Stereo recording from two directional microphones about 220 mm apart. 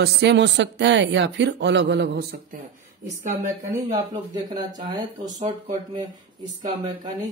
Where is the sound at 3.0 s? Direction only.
35° right (ahead or behind).